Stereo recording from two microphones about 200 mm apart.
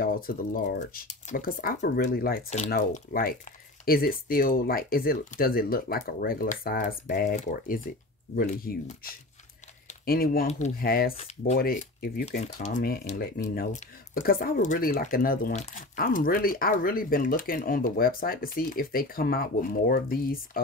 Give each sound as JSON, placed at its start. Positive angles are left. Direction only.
{"t": 0.0, "sound": "speech", "side_deg": 45}
{"t": 9.8, "sound": "a sound", "side_deg": 50}
{"t": 10.8, "sound": "speech", "side_deg": 50}
{"t": 11.1, "sound": "speech", "side_deg": 35}
{"t": 11.6, "sound": "speech", "side_deg": 45}
{"t": 12.3, "sound": "speech", "side_deg": 35}
{"t": 12.7, "sound": "speech", "side_deg": 50}